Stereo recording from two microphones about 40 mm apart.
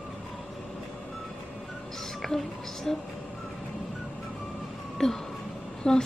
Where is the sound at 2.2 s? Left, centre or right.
Centre.